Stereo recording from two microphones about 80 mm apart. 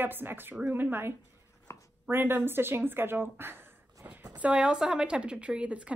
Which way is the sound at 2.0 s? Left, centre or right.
Right.